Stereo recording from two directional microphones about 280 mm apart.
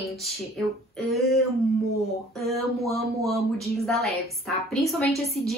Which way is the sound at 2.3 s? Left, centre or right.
Centre.